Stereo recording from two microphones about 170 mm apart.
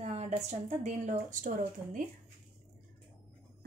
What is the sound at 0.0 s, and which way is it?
A woman's voice, 40° right (ahead or behind).